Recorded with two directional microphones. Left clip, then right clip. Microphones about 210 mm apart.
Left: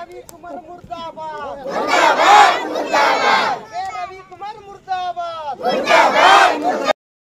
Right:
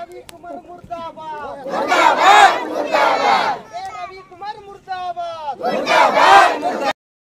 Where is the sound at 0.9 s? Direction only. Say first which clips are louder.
Even; 5° left (ahead or behind).